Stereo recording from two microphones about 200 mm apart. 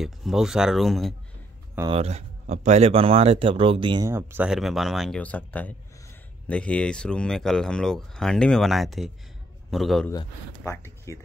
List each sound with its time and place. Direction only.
0.0 s speech: centre (ahead or behind)
1.9 s speech: 30° right (ahead or behind)
4.1 s speech: 10° right (ahead or behind)
10.1 s speech: 15° left (ahead or behind)